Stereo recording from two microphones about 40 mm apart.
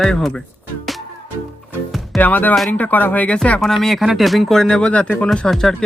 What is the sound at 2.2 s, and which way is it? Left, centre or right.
Speech, left.